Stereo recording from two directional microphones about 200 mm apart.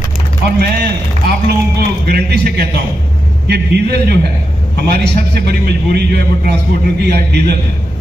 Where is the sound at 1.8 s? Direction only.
50° right (ahead or behind).